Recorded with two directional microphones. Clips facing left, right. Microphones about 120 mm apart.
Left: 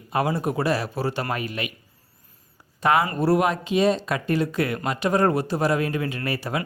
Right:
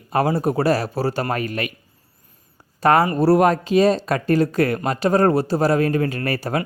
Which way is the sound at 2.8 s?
40° right (ahead or behind).